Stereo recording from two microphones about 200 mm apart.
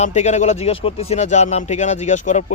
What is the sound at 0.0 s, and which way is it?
Speech, 35° left (ahead or behind).